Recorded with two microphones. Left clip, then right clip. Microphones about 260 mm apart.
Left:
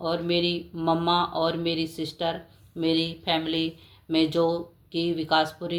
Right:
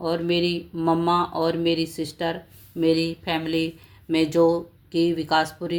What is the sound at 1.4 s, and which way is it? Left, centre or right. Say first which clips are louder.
Speech: right 3 dB; right.